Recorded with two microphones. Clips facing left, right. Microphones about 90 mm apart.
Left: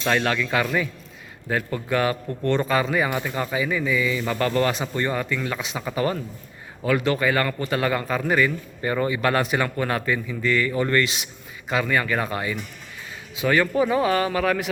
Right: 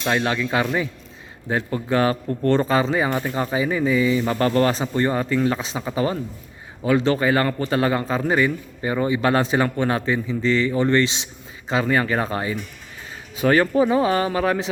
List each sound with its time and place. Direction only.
0.0 s a man's voice: 15° right (ahead or behind)